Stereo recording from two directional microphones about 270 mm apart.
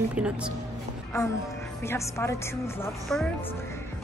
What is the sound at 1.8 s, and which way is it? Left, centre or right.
Speech, centre.